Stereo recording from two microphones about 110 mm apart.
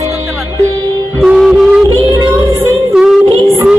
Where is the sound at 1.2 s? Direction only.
5° right (ahead or behind).